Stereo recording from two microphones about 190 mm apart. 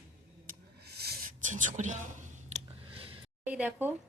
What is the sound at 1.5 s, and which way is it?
Whispering, 40° right (ahead or behind).